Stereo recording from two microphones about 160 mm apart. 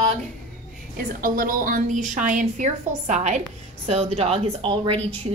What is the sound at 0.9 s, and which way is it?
A woman's voice, 60° right (ahead or behind).